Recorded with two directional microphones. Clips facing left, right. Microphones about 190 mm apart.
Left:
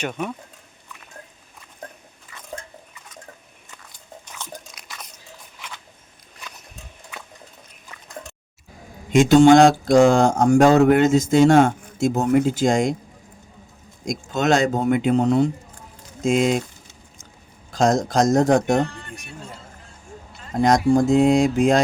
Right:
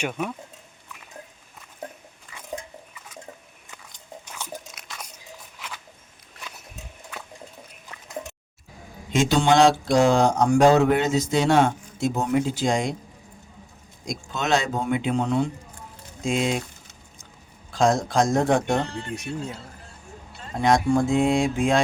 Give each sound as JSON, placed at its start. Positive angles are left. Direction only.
{"t": 0.0, "sound": "speech", "side_deg": -5}
{"t": 2.3, "sound": "a sound", "side_deg": -15}
{"t": 4.3, "sound": "biting", "side_deg": -10}
{"t": 9.1, "sound": "speech", "side_deg": 45}
{"t": 14.1, "sound": "speech", "side_deg": 45}
{"t": 17.7, "sound": "speech", "side_deg": 40}
{"t": 18.9, "sound": "speech", "side_deg": -30}
{"t": 20.6, "sound": "speech", "side_deg": 40}